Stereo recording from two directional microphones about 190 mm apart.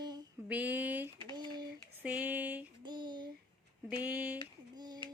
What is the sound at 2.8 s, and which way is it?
Child singing, 25° right (ahead or behind).